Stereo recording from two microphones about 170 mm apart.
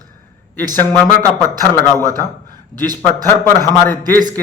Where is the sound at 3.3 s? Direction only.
15° left (ahead or behind).